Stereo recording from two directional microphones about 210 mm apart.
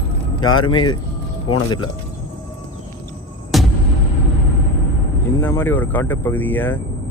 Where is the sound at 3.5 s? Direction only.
Centre (ahead or behind).